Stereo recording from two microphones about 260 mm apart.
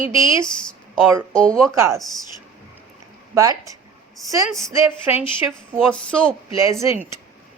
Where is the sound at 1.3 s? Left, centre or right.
Centre.